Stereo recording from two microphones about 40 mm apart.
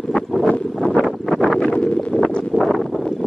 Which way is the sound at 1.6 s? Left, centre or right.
Left.